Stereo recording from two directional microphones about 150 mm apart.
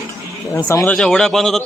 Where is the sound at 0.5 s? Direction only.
20° left (ahead or behind).